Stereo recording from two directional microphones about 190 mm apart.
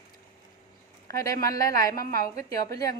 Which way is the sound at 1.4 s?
20° left (ahead or behind).